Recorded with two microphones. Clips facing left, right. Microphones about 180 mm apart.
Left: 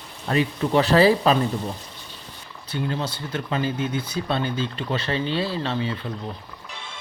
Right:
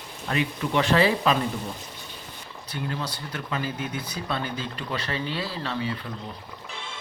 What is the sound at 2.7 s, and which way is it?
Speech, 25° left (ahead or behind).